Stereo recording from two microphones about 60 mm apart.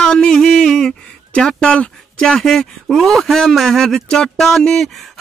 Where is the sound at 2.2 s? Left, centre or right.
Centre.